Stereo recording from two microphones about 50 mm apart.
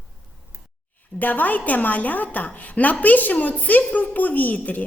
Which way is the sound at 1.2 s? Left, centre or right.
Left.